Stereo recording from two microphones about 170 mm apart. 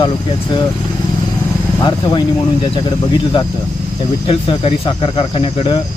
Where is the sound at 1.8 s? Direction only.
25° left (ahead or behind).